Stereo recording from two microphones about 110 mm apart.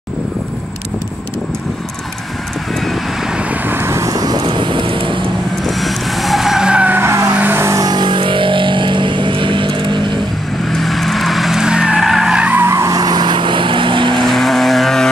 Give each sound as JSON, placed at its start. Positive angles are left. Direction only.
{"t": 3.3, "sound": "vehicle", "side_deg": -15}
{"t": 5.8, "sound": "vehicle", "side_deg": 0}
{"t": 7.3, "sound": "music", "side_deg": -20}
{"t": 7.8, "sound": "vehicle", "side_deg": -45}
{"t": 10.7, "sound": "vehicle", "side_deg": 0}
{"t": 12.6, "sound": "vehicle", "side_deg": -25}
{"t": 14.2, "sound": "vehicle", "side_deg": 0}